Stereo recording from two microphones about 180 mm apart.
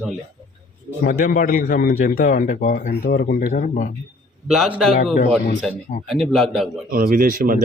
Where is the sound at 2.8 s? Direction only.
60° left (ahead or behind).